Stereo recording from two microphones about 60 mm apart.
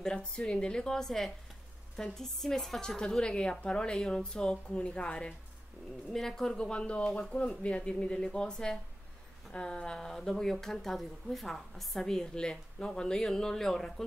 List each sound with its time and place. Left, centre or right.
0.0 s a woman's voice: centre
6.1 s speech: centre